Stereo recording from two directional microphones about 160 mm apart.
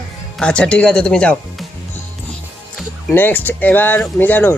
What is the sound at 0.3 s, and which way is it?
Speech, 5° left (ahead or behind).